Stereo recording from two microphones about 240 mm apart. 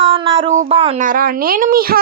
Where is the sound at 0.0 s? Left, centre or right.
Right.